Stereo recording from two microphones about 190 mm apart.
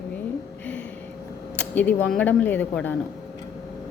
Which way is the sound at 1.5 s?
10° left (ahead or behind).